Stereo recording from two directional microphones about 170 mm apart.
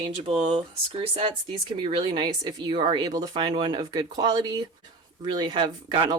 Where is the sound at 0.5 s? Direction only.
30° right (ahead or behind).